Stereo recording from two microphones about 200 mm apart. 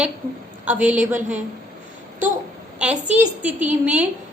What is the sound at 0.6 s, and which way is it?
Speech, 5° right (ahead or behind).